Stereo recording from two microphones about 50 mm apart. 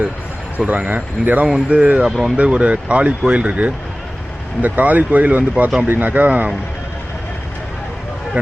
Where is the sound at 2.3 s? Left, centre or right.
Right.